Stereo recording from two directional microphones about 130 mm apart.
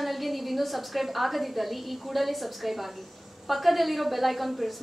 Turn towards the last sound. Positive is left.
turn(degrees=0)  # may be behind; listen again after turning